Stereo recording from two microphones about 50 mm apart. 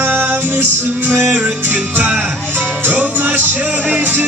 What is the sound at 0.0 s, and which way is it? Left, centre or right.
Music, right.